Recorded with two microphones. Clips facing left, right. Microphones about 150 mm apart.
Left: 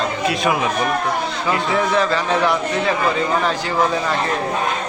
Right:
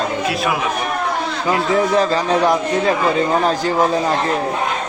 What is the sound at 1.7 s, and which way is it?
A man's voice, 40° right (ahead or behind).